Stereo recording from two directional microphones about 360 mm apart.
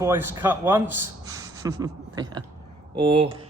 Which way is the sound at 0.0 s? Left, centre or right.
Centre.